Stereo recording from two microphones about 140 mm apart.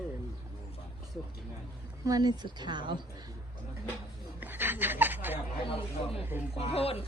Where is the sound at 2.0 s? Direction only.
25° right (ahead or behind).